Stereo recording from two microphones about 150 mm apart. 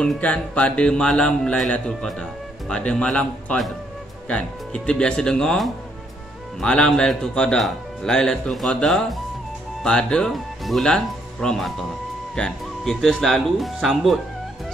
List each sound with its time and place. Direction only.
0.0 s speech: 5° left (ahead or behind)